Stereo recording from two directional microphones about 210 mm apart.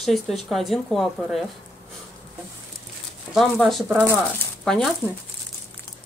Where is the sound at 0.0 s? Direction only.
Centre (ahead or behind).